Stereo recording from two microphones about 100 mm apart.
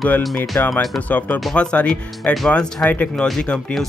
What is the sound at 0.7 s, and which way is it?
Speech, 15° left (ahead or behind).